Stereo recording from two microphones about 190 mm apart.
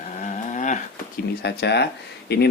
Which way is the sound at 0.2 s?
40° left (ahead or behind).